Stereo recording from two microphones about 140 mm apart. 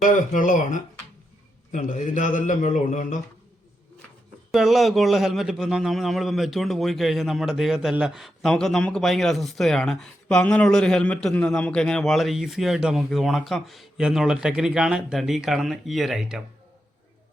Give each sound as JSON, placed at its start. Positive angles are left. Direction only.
{"t": 0.0, "sound": "a man's voice", "side_deg": 70}
{"t": 4.5, "sound": "a man's voice", "side_deg": 0}